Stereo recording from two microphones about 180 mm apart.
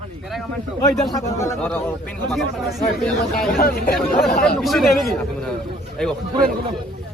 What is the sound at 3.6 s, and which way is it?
Speech, 60° left (ahead or behind).